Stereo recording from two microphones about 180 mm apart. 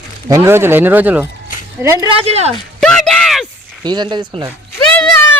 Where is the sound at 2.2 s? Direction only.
35° right (ahead or behind).